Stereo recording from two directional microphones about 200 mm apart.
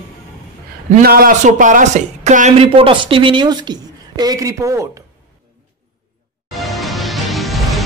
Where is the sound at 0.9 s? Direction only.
50° right (ahead or behind); by 4.9 s 15° right (ahead or behind).